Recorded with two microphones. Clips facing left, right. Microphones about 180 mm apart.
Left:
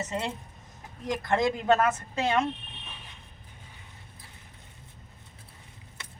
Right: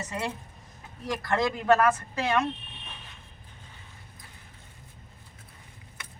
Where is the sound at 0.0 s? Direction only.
25° left (ahead or behind).